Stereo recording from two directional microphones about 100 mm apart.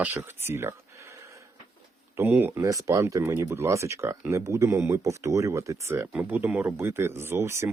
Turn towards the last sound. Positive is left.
turn(degrees=-25)  # may be behind; listen again after turning